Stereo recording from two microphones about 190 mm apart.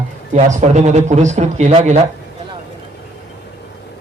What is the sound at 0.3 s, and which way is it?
A man's voice, 40° right (ahead or behind).